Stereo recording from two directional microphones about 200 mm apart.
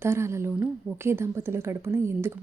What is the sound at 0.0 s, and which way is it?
Speech, 15° right (ahead or behind).